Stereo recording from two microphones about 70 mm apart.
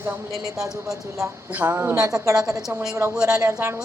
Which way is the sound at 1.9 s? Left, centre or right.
Right.